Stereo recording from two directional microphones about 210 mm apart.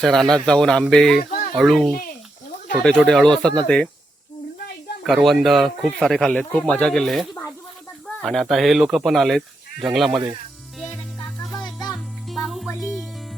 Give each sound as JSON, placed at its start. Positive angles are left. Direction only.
{"t": 0.0, "sound": "speech", "side_deg": 0}
{"t": 1.3, "sound": "a sound", "side_deg": 40}
{"t": 1.5, "sound": "speech", "side_deg": 0}
{"t": 5.0, "sound": "speech", "side_deg": 0}
{"t": 10.8, "sound": "music", "side_deg": 5}